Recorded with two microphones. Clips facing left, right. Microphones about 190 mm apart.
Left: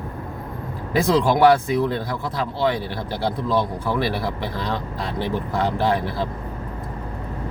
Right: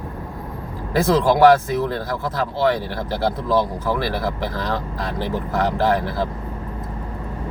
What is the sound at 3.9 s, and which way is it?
Speech, 15° left (ahead or behind).